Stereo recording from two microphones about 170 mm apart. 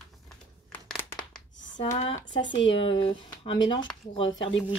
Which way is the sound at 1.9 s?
40° left (ahead or behind).